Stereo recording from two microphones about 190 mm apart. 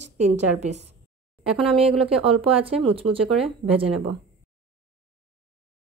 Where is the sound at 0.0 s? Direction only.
35° right (ahead or behind).